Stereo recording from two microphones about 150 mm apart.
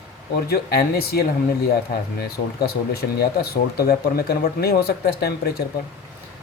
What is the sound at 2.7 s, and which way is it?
Speech, 90° left.